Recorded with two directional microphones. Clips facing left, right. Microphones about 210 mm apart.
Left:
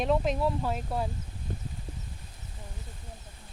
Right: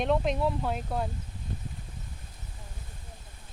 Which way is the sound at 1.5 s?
50° left (ahead or behind).